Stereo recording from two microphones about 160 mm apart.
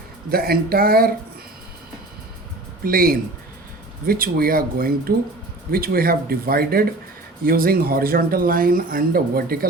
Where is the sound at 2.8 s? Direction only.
65° right (ahead or behind).